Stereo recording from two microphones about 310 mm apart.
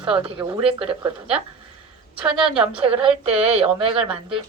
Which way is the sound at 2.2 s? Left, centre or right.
Centre.